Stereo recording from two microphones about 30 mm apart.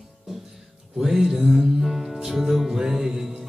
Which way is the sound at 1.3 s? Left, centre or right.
Centre.